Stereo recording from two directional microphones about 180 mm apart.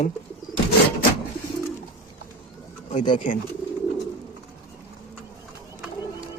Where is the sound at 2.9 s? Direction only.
45° left (ahead or behind).